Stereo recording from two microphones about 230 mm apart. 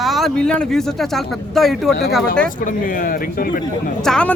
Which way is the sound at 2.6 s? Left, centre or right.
Left.